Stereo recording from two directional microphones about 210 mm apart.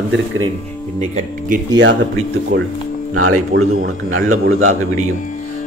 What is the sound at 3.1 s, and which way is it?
A man's voice, 90° right.